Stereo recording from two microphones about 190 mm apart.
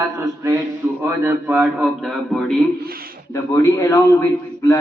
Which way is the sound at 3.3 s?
15° left (ahead or behind).